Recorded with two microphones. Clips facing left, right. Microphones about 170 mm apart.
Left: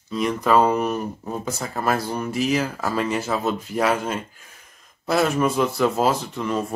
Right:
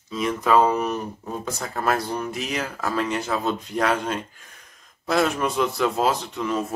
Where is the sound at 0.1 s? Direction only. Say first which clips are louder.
Left 1 dB; centre (ahead or behind).